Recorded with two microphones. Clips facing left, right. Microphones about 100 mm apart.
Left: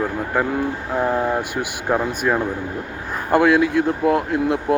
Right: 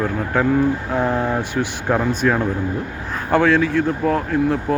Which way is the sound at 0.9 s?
10° left (ahead or behind).